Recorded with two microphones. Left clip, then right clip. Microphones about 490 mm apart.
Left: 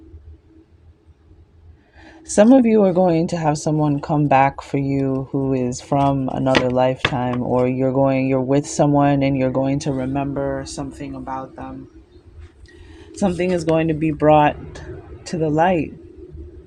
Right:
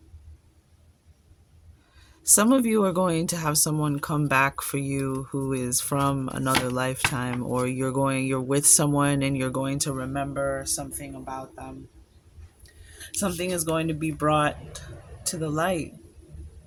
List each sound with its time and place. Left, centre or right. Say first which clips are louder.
2.0 s speech: left 8 dB; right
3.8 s speech: left 8 dB; right
4.3 s speech: left 7 dB; right
6.0 s speech: left 8 dB; right
6.5 s speech: left 9 dB; right
12.9 s speech: left 8 dB; right